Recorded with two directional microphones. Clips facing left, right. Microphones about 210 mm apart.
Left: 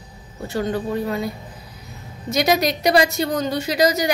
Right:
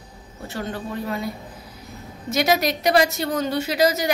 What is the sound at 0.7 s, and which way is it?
Speech, centre (ahead or behind).